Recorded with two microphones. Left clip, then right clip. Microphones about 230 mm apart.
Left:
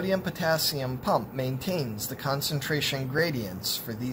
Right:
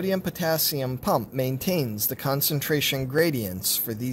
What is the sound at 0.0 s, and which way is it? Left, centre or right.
Speech, right.